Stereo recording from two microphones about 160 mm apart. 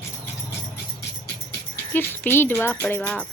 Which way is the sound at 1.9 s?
10° left (ahead or behind).